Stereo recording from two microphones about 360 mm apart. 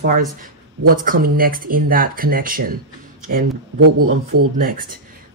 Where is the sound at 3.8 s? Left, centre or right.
Right.